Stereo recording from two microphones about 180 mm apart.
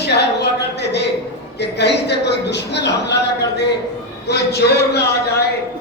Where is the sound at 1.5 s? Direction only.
70° left (ahead or behind).